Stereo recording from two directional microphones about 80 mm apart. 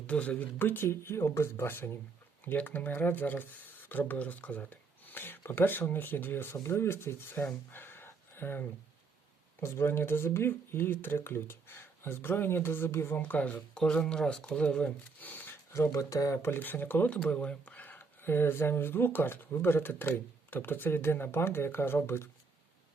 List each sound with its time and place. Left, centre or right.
0.1 s speech: centre
7.7 s a sound: left
9.6 s speech: left
15.7 s speech: left
16.4 s speech: left
17.2 s speech: centre; by 22.3 s left